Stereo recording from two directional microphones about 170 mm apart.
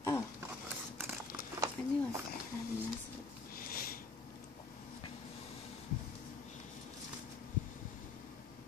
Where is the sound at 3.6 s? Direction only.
60° left (ahead or behind).